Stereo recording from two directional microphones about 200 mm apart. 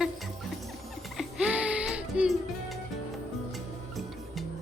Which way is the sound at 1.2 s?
5° right (ahead or behind).